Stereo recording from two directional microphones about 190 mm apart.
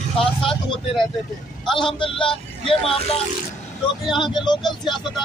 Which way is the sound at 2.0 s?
25° left (ahead or behind).